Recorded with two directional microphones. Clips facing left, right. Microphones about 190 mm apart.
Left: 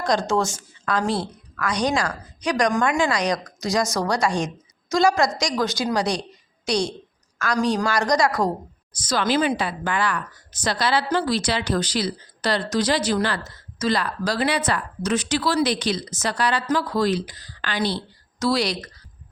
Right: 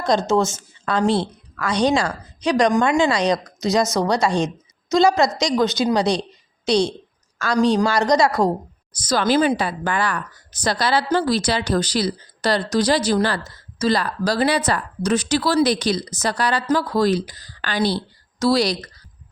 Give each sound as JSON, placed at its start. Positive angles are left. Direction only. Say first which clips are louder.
{"t": 0.0, "sound": "a woman's voice", "louder": "right 3 dB", "side_deg": -25}